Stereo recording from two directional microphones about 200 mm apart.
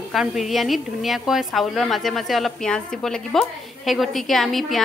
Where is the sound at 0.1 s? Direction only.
Centre (ahead or behind).